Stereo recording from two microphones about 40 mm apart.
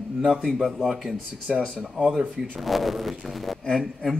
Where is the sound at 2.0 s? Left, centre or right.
Centre.